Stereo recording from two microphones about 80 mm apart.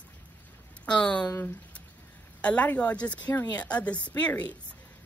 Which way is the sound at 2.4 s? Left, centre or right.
Centre.